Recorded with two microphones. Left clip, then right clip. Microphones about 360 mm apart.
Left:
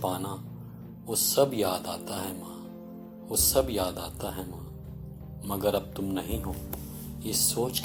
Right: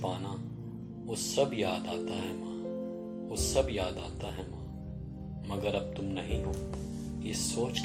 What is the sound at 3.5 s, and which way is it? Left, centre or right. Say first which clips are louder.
Speech: left 3 dB; left.